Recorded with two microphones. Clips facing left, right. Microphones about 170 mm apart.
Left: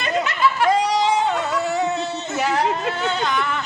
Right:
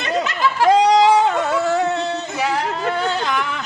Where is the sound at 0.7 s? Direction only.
90° right.